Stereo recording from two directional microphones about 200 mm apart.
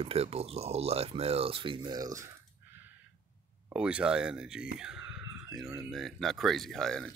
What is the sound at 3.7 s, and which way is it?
Speech, 5° right (ahead or behind).